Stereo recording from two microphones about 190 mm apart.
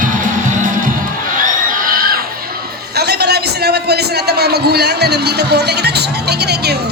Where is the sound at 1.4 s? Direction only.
50° right (ahead or behind).